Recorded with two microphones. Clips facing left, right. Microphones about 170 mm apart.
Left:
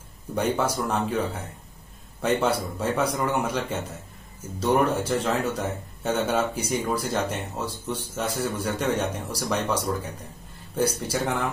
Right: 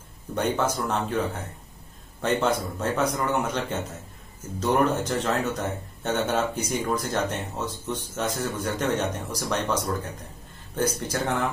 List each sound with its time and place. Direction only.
0.3 s a man's voice: 10° left (ahead or behind)
7.6 s speech: 30° left (ahead or behind)
7.9 s a man's voice: 5° left (ahead or behind)